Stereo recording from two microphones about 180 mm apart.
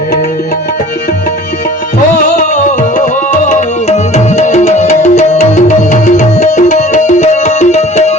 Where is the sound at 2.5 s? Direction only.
45° left (ahead or behind).